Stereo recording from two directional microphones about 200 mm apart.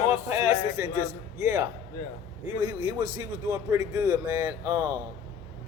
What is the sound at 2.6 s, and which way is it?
A man's voice, 10° right (ahead or behind).